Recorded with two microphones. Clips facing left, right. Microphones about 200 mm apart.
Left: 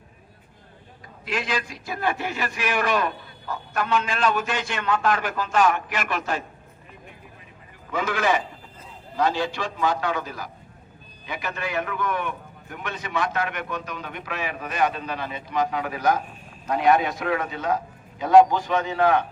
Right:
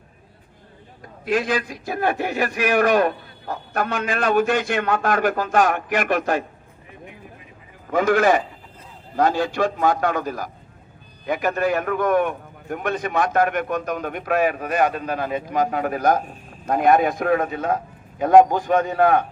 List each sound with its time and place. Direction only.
1.2 s a man's voice: 50° right (ahead or behind)
7.9 s a man's voice: 50° right (ahead or behind)